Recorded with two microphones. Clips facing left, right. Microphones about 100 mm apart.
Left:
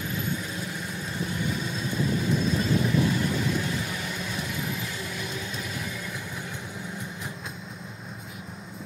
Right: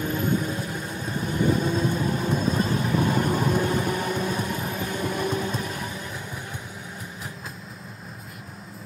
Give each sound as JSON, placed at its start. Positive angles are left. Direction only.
{"t": 0.0, "sound": "vehicle", "side_deg": -45}